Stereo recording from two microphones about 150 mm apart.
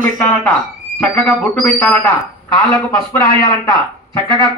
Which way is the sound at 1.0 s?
10° left (ahead or behind).